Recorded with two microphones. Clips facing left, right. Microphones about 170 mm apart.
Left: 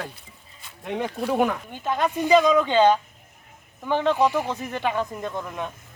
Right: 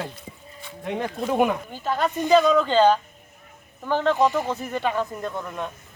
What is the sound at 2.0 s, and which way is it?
Speech, 10° left (ahead or behind).